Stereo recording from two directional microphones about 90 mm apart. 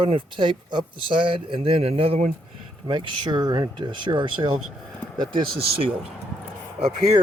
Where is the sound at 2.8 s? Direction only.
65° right (ahead or behind).